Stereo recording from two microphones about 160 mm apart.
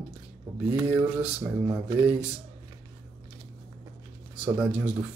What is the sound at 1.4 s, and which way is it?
Speech, 15° right (ahead or behind).